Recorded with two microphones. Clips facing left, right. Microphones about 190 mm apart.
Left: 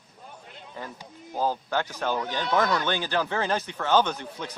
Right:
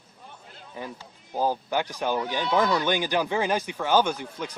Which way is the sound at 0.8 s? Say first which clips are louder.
Right 2 dB; 15° right (ahead or behind).